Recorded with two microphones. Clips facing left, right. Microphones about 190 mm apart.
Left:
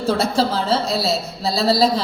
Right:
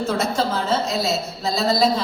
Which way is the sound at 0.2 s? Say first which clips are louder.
Left 3 dB; 35° left (ahead or behind).